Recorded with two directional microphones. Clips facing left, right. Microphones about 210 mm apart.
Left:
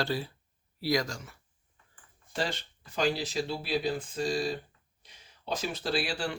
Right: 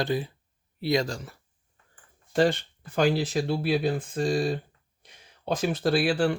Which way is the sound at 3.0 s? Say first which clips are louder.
Right 6 dB; 55° right (ahead or behind).